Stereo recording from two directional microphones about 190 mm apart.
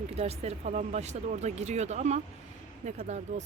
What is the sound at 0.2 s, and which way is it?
Speech, 35° right (ahead or behind).